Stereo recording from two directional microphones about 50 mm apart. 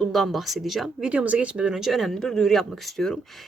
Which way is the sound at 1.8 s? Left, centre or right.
Centre.